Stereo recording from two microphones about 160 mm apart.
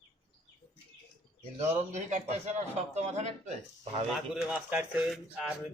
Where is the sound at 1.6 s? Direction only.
45° right (ahead or behind).